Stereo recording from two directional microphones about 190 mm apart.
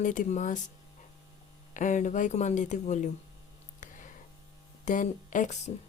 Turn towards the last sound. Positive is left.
turn(degrees=40)  # may be behind; listen again after turning